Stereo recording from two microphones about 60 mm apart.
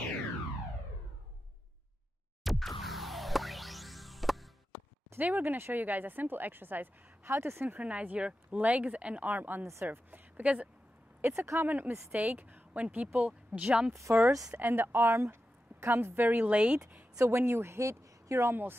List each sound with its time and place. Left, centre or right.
2.4 s music: centre
5.1 s speech: right
7.8 s a woman's voice: right
11.1 s speech: right
14.1 s speech: right; by 17.0 s centre
17.3 s speech: right
18.5 s speech: right